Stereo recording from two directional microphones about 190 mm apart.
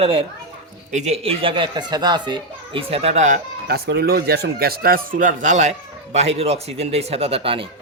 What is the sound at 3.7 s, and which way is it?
A man's voice, 55° right (ahead or behind).